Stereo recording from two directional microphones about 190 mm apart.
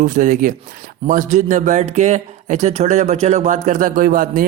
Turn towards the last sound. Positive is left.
turn(degrees=-45)  # may be behind; listen again after turning